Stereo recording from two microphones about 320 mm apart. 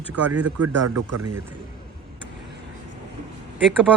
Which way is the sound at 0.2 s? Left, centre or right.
Right.